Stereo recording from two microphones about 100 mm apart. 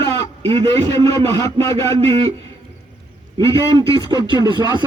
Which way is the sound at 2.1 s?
90° right.